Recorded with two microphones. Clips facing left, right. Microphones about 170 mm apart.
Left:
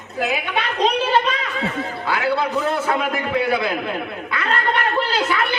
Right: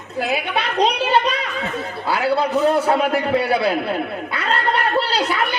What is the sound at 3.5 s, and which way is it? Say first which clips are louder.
Speech: right 2 dB; 35° right (ahead or behind).